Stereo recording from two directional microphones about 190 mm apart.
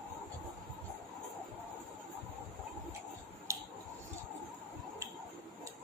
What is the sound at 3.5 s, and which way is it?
Scissors, 15° right (ahead or behind).